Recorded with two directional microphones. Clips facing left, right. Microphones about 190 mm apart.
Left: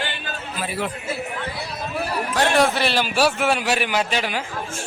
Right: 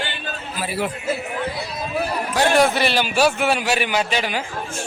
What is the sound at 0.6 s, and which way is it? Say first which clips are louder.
Speech: right 2 dB; 5° right (ahead or behind).